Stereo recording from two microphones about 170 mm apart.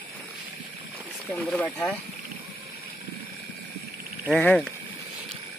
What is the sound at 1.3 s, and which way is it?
Speech, 5° left (ahead or behind).